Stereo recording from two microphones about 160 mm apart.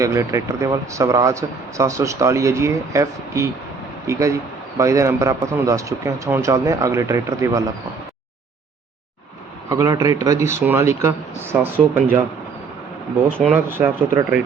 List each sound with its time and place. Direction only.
0.0 s speech: 20° right (ahead or behind)
9.6 s speech: 20° right (ahead or behind)
13.5 s speech: 15° right (ahead or behind)